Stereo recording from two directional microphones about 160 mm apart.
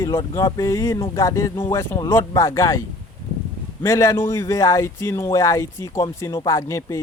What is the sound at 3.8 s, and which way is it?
Speech, 20° left (ahead or behind).